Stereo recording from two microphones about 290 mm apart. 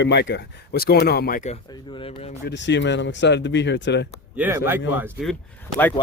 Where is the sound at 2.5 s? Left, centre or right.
Left.